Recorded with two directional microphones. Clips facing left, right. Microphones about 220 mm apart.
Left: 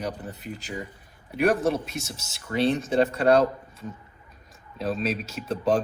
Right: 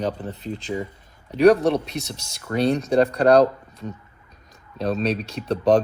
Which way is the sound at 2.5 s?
40° right (ahead or behind).